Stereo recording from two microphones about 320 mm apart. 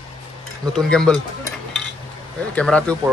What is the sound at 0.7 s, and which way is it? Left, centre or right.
Speech, centre.